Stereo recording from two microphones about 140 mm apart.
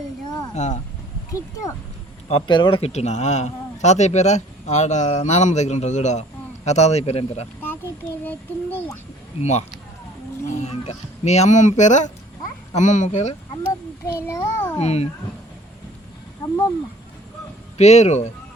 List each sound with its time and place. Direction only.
0.5 s speech: 55° left (ahead or behind)
1.3 s speech: 20° left (ahead or behind)
2.5 s speech: 35° left (ahead or behind)
8.2 s child singing: 15° left (ahead or behind)
9.4 s speech: 50° left (ahead or behind)
13.6 s a child's voice: 20° left (ahead or behind)
14.8 s speech: 50° left (ahead or behind)
17.7 s speech: 55° left (ahead or behind)